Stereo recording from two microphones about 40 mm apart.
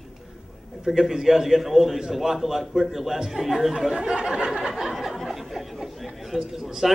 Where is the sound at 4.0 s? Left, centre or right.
Right.